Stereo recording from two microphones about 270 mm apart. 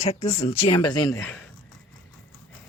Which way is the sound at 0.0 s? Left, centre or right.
Left.